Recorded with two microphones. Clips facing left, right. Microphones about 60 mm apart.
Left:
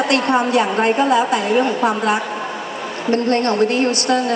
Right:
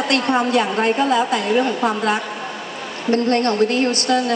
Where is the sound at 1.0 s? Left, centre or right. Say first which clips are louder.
Left 2 dB; left.